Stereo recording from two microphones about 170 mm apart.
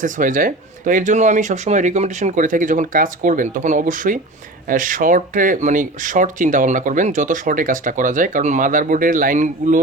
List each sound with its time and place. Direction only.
0.0 s speech: 50° right (ahead or behind)